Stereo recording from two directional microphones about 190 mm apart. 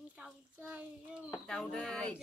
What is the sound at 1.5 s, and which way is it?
Speech, 5° left (ahead or behind).